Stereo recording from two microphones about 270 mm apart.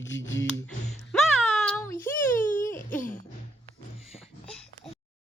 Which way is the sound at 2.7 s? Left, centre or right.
Left.